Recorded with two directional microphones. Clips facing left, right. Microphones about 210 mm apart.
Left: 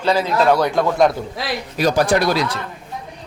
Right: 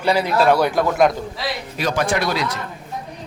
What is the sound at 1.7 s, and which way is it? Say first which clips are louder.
Speech: left 5 dB; 35° left (ahead or behind).